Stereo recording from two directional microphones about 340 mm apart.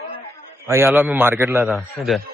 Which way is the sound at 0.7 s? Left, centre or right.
Centre.